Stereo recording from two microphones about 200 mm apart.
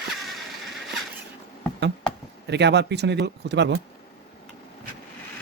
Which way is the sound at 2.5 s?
60° right (ahead or behind).